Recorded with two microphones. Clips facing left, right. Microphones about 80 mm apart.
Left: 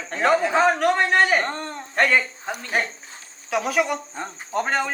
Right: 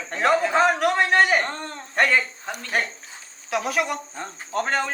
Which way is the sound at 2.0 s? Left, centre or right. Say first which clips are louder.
Left 1 dB; centre.